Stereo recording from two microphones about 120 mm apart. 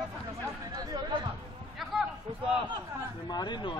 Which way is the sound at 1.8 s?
5° right (ahead or behind).